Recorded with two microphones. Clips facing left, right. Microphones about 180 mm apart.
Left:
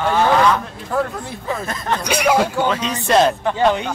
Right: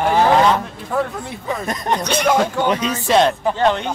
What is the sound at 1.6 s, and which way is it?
Speech, 20° right (ahead or behind).